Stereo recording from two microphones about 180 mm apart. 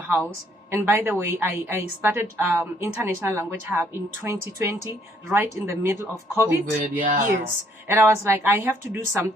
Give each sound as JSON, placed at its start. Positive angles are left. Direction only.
{"t": 0.7, "sound": "a woman's voice", "side_deg": -10}
{"t": 6.8, "sound": "speech", "side_deg": -50}
{"t": 7.9, "sound": "a woman's voice", "side_deg": -15}